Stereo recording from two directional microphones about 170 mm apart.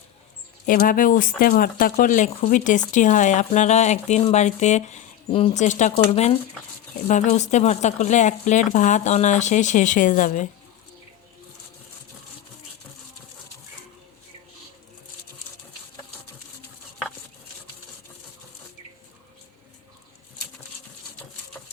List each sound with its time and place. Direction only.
0.7 s speech: 55° left (ahead or behind)